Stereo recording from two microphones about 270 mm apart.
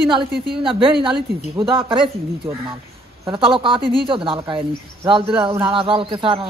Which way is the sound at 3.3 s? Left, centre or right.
Centre.